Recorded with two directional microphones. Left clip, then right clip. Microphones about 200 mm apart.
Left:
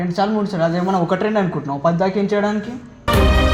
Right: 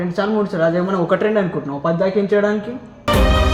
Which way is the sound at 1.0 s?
35° left (ahead or behind).